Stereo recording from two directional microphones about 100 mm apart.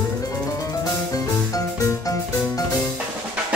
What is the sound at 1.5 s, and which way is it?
Music, 35° left (ahead or behind).